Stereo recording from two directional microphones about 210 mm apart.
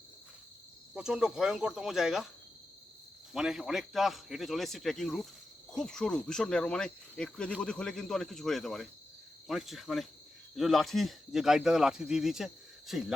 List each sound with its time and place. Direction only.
0.9 s speech: 5° right (ahead or behind)
3.3 s speech: centre (ahead or behind)